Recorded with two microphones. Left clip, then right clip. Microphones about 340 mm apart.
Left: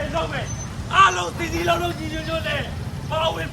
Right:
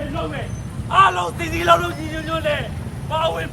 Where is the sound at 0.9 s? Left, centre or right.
Centre.